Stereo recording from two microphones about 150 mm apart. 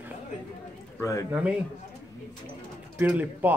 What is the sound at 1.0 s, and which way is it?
Speech, 20° left (ahead or behind).